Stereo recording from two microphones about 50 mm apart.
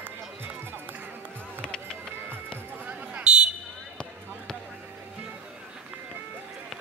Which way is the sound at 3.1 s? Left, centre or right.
Centre.